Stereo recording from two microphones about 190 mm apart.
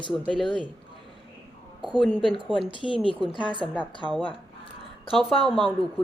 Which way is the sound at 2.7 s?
25° left (ahead or behind).